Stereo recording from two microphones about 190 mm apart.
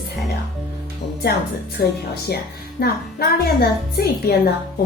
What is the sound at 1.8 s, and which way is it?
Speech, 55° left (ahead or behind).